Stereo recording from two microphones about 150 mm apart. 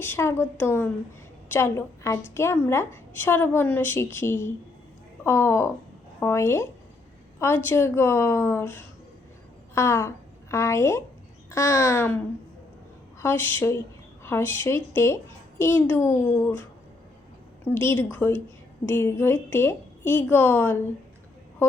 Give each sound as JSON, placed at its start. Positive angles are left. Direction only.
{"t": 0.0, "sound": "a woman's voice", "side_deg": 15}
{"t": 17.7, "sound": "a woman's voice", "side_deg": 15}